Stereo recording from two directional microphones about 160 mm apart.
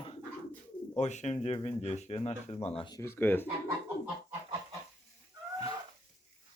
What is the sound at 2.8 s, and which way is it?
Speech, 25° left (ahead or behind).